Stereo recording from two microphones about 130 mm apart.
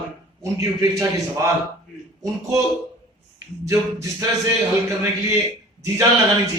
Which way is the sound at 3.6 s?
25° right (ahead or behind).